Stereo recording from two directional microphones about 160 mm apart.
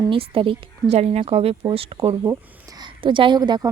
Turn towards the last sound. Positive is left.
turn(degrees=-25)  # may be behind; listen again after turning